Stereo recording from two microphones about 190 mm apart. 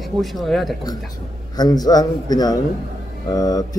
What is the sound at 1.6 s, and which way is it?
A man's voice, 20° left (ahead or behind).